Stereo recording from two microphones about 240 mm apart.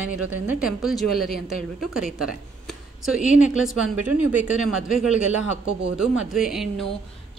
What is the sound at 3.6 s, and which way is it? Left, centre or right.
A woman's voice, centre.